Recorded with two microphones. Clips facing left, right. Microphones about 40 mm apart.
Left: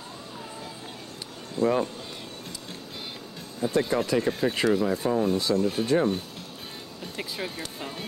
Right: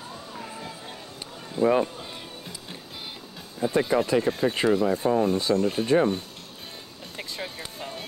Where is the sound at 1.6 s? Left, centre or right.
Right.